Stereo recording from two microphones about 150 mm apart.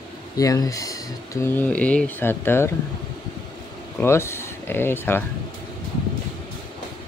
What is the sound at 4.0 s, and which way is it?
Speech, 15° left (ahead or behind).